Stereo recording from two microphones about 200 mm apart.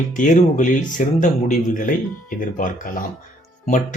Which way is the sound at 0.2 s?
40° left (ahead or behind).